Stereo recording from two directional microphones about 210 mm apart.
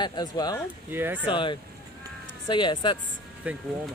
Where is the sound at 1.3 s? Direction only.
25° left (ahead or behind).